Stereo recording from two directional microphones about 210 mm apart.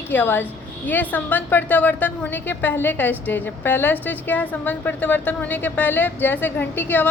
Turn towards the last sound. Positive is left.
turn(degrees=10)  # may be behind; listen again after turning